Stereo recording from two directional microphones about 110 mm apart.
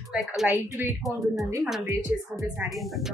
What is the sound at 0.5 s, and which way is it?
Speech, 15° right (ahead or behind).